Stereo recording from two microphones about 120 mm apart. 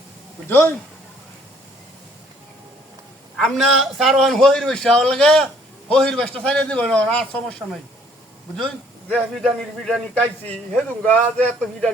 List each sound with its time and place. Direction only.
0.4 s speech: 20° left (ahead or behind)
3.3 s a man's voice: 5° left (ahead or behind)
9.0 s a man's voice: 5° left (ahead or behind)
10.2 s a man's voice: 10° left (ahead or behind)